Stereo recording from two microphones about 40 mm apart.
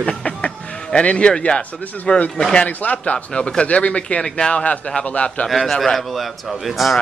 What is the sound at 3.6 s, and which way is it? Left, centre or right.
Speech, left.